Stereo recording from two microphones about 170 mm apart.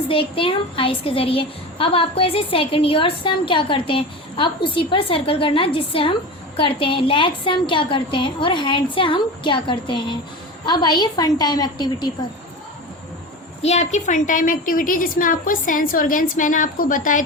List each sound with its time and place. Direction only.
0.1 s a woman's voice: 30° left (ahead or behind)
13.7 s a woman's voice: 40° left (ahead or behind)